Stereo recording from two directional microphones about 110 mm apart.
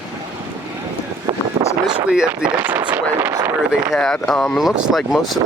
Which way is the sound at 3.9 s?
5° left (ahead or behind).